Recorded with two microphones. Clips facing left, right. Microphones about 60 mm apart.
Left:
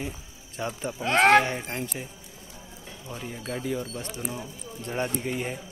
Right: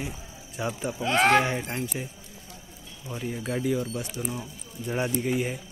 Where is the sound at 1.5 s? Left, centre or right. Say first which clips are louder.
Right 2 dB; centre.